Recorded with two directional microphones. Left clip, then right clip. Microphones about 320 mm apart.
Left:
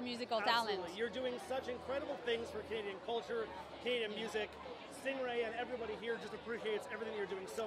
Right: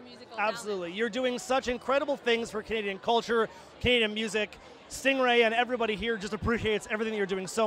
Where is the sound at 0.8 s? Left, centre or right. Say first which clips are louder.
Right 10 dB; right.